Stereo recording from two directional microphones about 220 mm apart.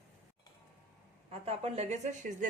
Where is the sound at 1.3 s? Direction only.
25° right (ahead or behind).